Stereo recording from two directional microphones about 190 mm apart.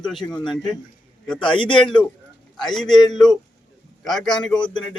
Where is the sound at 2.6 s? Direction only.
Centre (ahead or behind).